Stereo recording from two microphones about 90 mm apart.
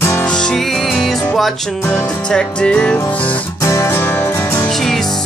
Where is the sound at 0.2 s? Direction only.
10° left (ahead or behind).